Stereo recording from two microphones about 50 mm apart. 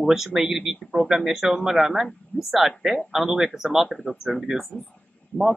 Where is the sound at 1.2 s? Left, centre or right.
Centre.